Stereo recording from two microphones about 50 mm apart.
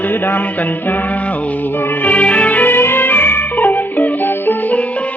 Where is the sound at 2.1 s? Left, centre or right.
Left.